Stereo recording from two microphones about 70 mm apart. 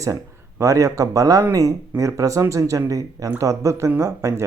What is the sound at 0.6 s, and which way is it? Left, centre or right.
Speech, right.